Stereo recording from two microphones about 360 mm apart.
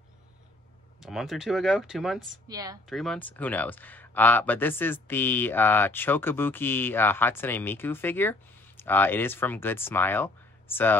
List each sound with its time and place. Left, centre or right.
1.0 s speech: centre
2.9 s speech: centre